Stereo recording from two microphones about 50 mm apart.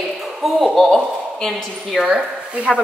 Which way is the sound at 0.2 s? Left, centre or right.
Centre.